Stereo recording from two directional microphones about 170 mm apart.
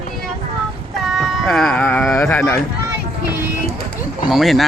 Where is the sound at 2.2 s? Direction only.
10° left (ahead or behind).